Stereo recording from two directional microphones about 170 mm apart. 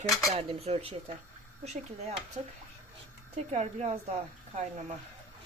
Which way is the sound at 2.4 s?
40° right (ahead or behind).